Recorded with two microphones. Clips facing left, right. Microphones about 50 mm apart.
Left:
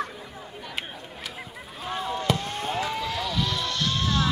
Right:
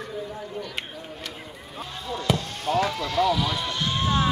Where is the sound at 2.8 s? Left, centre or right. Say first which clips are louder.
Right 6 dB; centre; by 4.2 s right.